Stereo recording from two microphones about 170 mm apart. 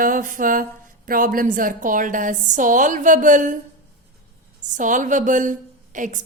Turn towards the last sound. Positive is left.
turn(degrees=-50)  # may be behind; listen again after turning